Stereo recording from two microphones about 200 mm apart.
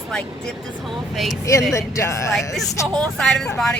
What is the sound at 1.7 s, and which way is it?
Speech, 15° left (ahead or behind).